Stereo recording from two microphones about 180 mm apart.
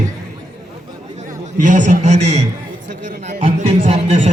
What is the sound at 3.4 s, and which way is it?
Speech, 35° right (ahead or behind).